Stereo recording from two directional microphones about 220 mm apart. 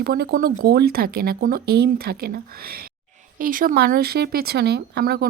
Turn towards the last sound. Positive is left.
turn(degrees=-45)  # may be behind; listen again after turning